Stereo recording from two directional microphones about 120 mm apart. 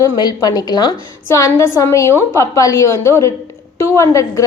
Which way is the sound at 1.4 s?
20° left (ahead or behind).